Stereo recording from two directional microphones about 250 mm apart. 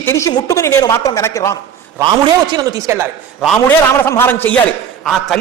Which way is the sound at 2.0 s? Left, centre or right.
Centre.